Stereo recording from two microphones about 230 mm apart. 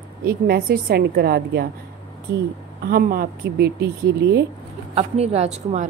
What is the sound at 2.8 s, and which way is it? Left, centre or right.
A woman's voice, right.